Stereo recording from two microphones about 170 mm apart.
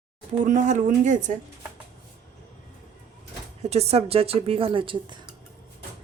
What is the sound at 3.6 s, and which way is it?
A woman's voice, 40° right (ahead or behind).